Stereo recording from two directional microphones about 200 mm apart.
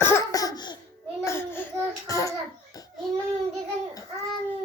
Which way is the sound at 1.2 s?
10° left (ahead or behind).